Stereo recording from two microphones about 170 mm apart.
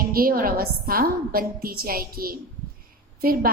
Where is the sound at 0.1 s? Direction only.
60° right (ahead or behind).